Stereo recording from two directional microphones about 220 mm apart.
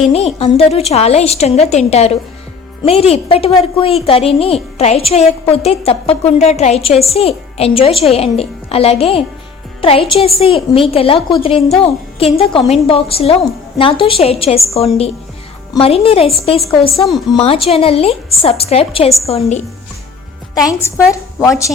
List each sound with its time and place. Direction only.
0.1 s a woman's voice: 25° left (ahead or behind)
15.7 s a woman's voice: 25° left (ahead or behind)
16.9 s a woman's voice: centre (ahead or behind)
17.3 s a woman's voice: 25° left (ahead or behind)
20.8 s speech: 15° left (ahead or behind)